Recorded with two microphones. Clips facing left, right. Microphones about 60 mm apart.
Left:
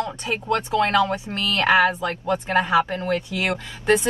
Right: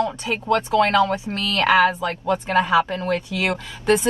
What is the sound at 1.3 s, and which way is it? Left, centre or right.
Speech, left.